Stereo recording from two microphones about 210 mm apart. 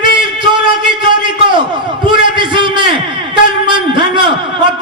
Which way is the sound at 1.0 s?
20° right (ahead or behind).